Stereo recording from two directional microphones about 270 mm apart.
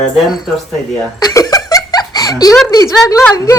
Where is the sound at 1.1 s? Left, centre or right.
Centre.